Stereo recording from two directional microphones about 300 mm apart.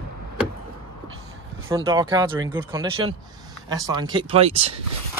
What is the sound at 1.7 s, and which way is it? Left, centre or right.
Speech, centre.